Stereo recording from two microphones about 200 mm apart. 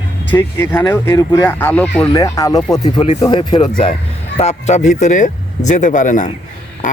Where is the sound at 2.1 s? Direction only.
15° left (ahead or behind).